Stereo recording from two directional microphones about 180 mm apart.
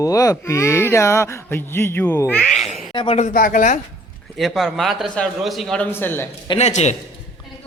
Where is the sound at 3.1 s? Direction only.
45° left (ahead or behind).